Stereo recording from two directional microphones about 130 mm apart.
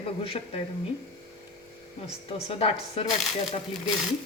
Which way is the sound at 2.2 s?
50° left (ahead or behind).